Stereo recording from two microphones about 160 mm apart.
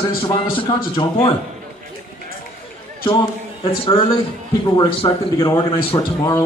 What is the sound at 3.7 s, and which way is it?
Speech, 35° left (ahead or behind).